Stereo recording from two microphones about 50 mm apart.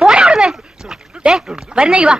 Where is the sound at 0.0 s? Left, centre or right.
Centre.